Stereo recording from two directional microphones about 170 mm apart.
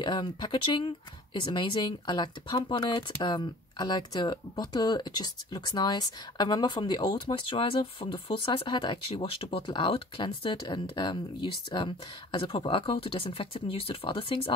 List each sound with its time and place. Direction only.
0.0 s speech: 25° left (ahead or behind)